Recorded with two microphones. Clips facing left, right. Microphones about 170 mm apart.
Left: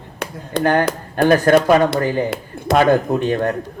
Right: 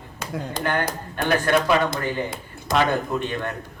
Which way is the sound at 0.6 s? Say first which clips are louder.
Left 9 dB; 45° left (ahead or behind).